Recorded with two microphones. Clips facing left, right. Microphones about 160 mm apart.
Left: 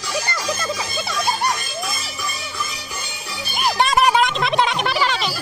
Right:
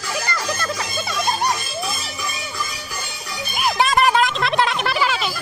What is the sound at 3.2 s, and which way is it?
Music, 30° left (ahead or behind).